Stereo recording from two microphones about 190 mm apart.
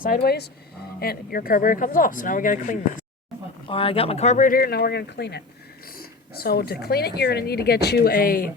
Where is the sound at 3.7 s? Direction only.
30° left (ahead or behind); by 5.4 s 60° left (ahead or behind).